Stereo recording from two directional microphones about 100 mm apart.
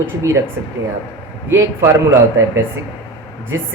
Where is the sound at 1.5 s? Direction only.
25° right (ahead or behind).